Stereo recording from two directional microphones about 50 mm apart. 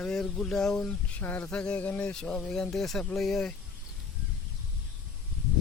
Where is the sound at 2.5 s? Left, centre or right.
Centre.